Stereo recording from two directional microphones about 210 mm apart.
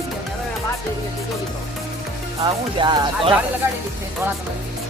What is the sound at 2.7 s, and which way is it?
Speech, 20° right (ahead or behind).